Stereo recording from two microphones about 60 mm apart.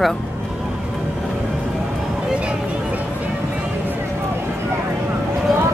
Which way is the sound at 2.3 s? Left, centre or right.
Centre.